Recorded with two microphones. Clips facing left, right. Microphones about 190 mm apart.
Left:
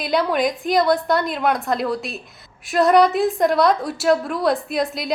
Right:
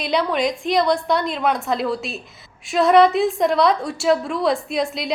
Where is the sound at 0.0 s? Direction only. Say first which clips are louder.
Left 1 dB; centre (ahead or behind).